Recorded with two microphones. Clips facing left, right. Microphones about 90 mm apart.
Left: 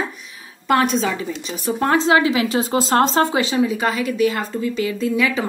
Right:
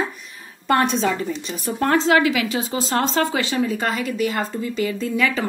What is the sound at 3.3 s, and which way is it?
Speech, 20° left (ahead or behind).